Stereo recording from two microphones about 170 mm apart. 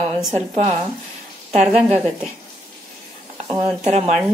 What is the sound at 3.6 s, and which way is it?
Speech, 40° right (ahead or behind).